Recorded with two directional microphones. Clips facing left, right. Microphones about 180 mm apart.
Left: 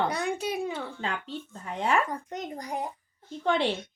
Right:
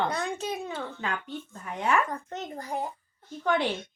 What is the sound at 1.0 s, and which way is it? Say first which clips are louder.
Speech: even; 30° left (ahead or behind).